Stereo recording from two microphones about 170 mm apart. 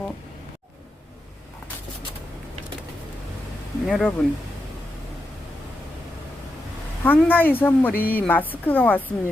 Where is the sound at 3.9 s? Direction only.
5° left (ahead or behind).